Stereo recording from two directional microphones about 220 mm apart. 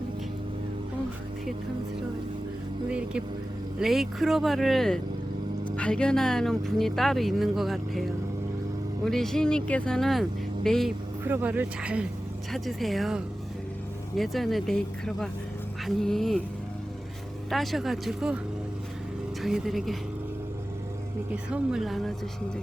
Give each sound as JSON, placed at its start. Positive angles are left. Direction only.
{"t": 2.9, "sound": "vehicle", "side_deg": -5}
{"t": 3.8, "sound": "speech", "side_deg": 0}
{"t": 9.0, "sound": "speech", "side_deg": 0}
{"t": 17.5, "sound": "speech", "side_deg": 0}
{"t": 19.4, "sound": "speech", "side_deg": 0}
{"t": 21.5, "sound": "speech", "side_deg": 0}